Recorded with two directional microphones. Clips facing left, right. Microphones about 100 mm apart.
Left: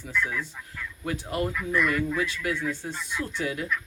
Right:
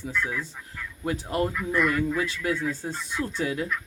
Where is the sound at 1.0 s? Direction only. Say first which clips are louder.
Right 2 dB; 30° right (ahead or behind).